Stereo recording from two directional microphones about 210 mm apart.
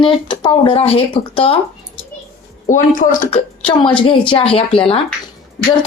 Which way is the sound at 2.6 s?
40° left (ahead or behind).